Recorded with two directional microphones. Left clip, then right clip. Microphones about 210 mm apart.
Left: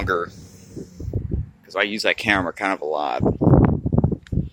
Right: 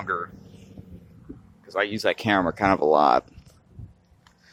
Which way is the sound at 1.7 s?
5° left (ahead or behind).